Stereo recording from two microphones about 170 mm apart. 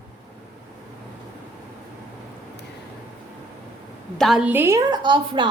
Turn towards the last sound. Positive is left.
turn(degrees=-30)  # may be behind; listen again after turning